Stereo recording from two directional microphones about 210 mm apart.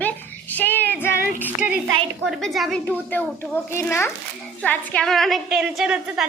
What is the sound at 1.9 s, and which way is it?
Speech, 70° right (ahead or behind).